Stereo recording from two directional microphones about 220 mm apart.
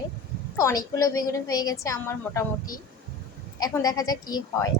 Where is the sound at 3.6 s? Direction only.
15° left (ahead or behind).